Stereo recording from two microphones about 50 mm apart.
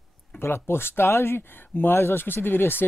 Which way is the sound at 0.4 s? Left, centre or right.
Left.